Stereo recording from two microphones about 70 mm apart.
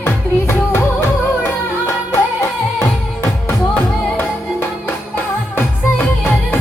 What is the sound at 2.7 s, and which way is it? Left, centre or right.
Music, left.